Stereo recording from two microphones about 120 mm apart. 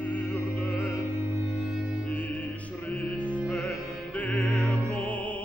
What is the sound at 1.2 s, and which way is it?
Music, 20° right (ahead or behind).